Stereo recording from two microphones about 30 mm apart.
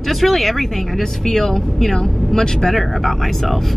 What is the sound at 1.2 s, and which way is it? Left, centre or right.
Speech, centre.